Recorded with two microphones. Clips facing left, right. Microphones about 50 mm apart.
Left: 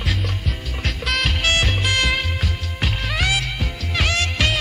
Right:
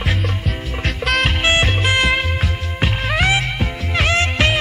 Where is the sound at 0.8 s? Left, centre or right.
Centre.